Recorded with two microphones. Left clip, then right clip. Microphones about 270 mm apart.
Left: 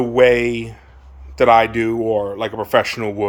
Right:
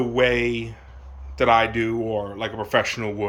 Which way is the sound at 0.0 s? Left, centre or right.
Centre.